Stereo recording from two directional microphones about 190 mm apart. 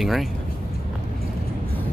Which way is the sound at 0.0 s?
Centre (ahead or behind).